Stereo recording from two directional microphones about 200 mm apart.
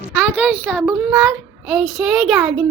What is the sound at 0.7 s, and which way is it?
A child's voice, 5° right (ahead or behind).